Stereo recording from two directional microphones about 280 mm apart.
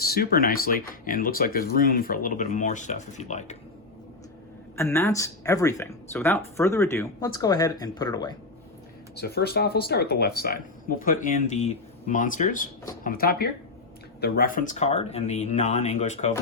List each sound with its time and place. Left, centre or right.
0.0 s speech: left
4.8 s speech: centre
9.1 s speech: left